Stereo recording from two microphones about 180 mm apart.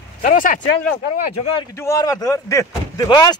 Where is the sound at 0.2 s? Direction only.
50° left (ahead or behind).